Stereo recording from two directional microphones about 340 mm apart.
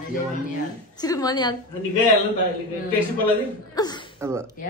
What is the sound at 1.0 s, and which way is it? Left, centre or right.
Speech, centre.